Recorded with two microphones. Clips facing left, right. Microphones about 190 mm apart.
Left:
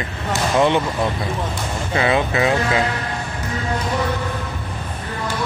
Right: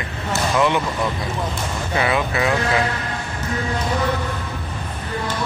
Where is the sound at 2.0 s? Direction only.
25° left (ahead or behind).